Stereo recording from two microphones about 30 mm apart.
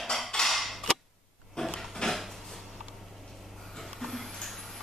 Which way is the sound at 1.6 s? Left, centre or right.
Centre.